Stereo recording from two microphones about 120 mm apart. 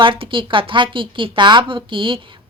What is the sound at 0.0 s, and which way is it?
A woman's voice, 45° right (ahead or behind).